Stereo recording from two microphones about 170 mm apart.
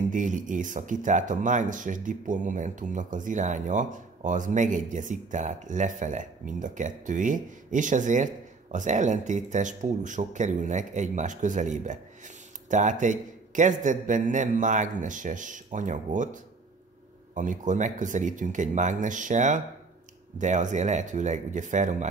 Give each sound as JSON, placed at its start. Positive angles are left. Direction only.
{"t": 0.1, "sound": "speech", "side_deg": -50}